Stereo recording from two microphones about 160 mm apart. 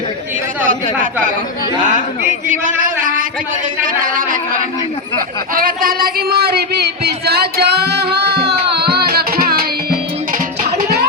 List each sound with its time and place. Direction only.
2.5 s speech: 55° right (ahead or behind)
5.5 s speech: 65° right (ahead or behind)